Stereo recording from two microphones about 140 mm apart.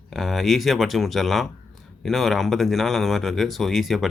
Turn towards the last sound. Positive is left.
turn(degrees=0)  # may be behind; listen again after turning